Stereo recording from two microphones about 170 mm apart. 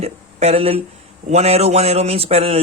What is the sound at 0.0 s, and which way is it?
Speech, 40° right (ahead or behind).